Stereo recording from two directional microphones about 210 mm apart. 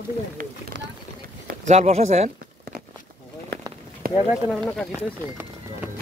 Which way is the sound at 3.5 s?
50° right (ahead or behind).